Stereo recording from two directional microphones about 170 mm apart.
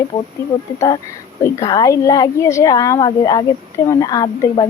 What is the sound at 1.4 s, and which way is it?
A woman's voice, 20° left (ahead or behind).